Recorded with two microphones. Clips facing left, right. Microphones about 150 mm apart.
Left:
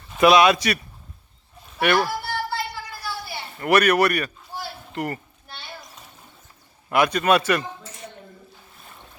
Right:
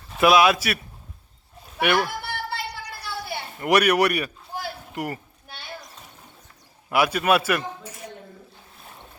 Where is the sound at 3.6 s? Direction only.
10° right (ahead or behind).